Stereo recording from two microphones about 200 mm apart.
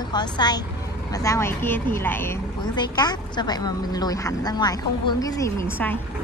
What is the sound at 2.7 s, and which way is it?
A woman's voice, 20° left (ahead or behind).